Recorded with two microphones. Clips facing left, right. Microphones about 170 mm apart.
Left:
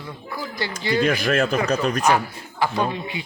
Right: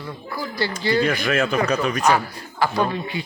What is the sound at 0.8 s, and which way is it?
Speech, 15° left (ahead or behind).